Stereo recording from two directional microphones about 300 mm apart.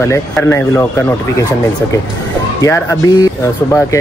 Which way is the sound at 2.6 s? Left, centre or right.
Centre.